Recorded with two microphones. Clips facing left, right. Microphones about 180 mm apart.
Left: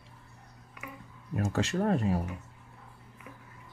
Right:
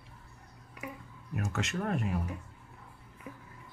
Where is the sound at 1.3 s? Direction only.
30° left (ahead or behind).